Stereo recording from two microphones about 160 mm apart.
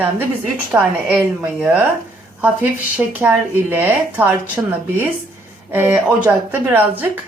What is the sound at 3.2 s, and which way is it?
A woman's voice, 10° right (ahead or behind).